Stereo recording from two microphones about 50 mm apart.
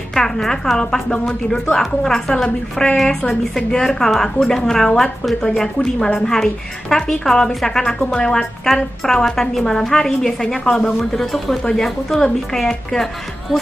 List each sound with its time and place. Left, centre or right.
0.1 s speech: centre
5.8 s speech: centre
6.1 s speech: centre